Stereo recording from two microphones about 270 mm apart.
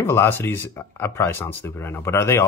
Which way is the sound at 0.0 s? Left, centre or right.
Centre.